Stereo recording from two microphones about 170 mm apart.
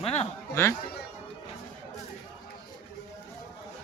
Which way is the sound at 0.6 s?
15° left (ahead or behind).